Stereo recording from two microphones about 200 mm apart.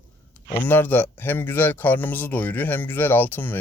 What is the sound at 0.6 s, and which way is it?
Speech, 10° left (ahead or behind).